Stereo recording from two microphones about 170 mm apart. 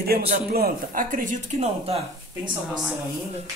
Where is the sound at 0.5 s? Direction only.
60° right (ahead or behind); by 2.0 s 40° right (ahead or behind).